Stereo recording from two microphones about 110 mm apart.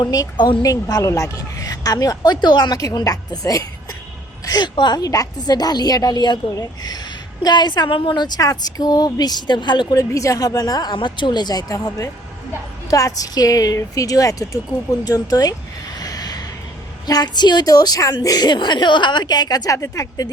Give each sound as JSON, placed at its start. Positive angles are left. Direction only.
{"t": 0.0, "sound": "a woman's voice", "side_deg": 35}
{"t": 9.9, "sound": "a woman's voice", "side_deg": 30}
{"t": 16.0, "sound": "a sound", "side_deg": 35}
{"t": 17.1, "sound": "a woman's voice", "side_deg": 40}